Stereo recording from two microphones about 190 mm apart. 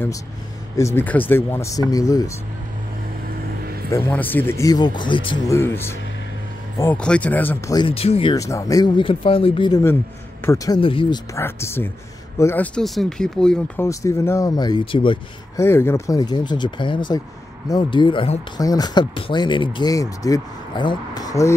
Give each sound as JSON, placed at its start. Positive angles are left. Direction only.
{"t": 0.7, "sound": "speech", "side_deg": 15}
{"t": 3.9, "sound": "speech", "side_deg": 10}
{"t": 5.6, "sound": "speech", "side_deg": 10}
{"t": 7.7, "sound": "speech", "side_deg": 25}
{"t": 8.4, "sound": "speech", "side_deg": 15}
{"t": 10.4, "sound": "speech", "side_deg": 15}
{"t": 11.3, "sound": "speech", "side_deg": 15}
{"t": 13.8, "sound": "speech", "side_deg": 15}
{"t": 15.5, "sound": "speech", "side_deg": 15}